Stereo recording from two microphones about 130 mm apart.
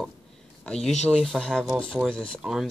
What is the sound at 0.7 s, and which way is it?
Speech, 5° left (ahead or behind).